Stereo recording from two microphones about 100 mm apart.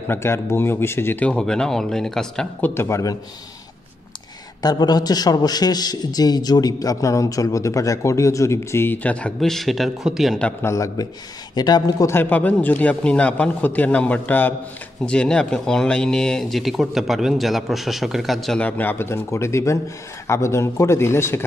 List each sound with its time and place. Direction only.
0.1 s a man's voice: 25° left (ahead or behind); by 2.4 s 5° left (ahead or behind)
2.6 s a man's voice: 25° left (ahead or behind)
4.6 s a man's voice: 45° left (ahead or behind); by 10.4 s 5° right (ahead or behind)
10.6 s a man's voice: 30° left (ahead or behind)
11.5 s speech: 45° left (ahead or behind)
12.1 s a man's voice: 20° left (ahead or behind); by 18.6 s centre (ahead or behind)
18.6 s a man's voice: 15° left (ahead or behind)